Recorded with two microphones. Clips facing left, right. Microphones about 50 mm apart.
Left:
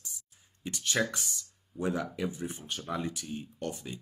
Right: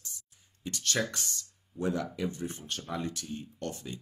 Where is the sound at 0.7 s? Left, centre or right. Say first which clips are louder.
Left 1 dB; centre.